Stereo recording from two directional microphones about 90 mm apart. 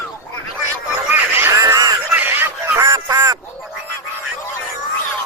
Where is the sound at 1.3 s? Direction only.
35° right (ahead or behind).